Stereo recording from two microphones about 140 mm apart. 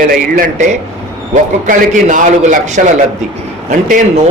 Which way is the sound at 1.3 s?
70° right (ahead or behind).